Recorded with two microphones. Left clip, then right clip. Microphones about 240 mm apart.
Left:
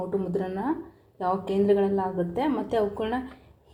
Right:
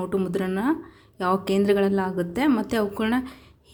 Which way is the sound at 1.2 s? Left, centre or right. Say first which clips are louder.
Right 3 dB; right.